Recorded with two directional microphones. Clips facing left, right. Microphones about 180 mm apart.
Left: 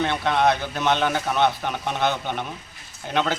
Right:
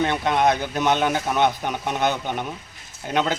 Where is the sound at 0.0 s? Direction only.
15° right (ahead or behind).